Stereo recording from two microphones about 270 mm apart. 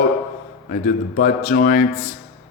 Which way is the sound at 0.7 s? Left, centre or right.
Left.